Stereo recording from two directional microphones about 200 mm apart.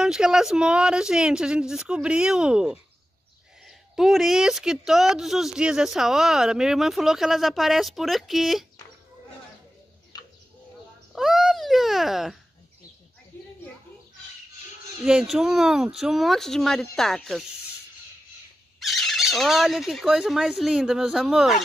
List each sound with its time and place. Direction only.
0.0 s a woman's voice: 5° right (ahead or behind)
10.1 s bird: 20° left (ahead or behind)
11.1 s speech: centre (ahead or behind)
13.3 s a sound: 10° left (ahead or behind)
15.0 s a woman's voice: 5° right (ahead or behind)
18.8 s a woman's voice: centre (ahead or behind)